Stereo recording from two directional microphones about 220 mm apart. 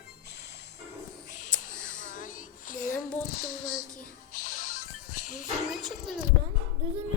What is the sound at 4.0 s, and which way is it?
Music, 40° left (ahead or behind).